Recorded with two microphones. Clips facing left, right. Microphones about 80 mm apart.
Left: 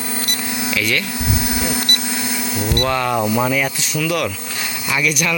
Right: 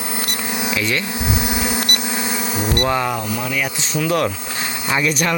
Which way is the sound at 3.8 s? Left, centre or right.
Right.